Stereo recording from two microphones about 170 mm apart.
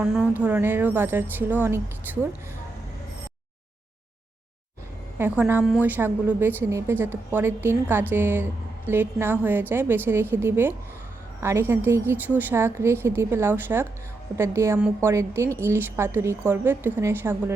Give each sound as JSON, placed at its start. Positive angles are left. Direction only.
{"t": 0.0, "sound": "a woman's voice", "side_deg": -5}
{"t": 5.1, "sound": "a woman's voice", "side_deg": -10}